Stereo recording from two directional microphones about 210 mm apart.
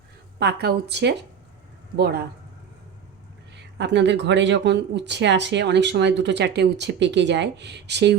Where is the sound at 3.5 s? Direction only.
55° right (ahead or behind).